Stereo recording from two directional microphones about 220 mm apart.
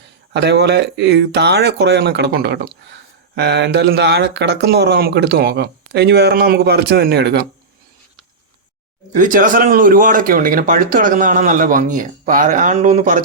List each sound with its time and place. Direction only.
0.3 s speech: 50° right (ahead or behind)
9.1 s speech: 35° right (ahead or behind)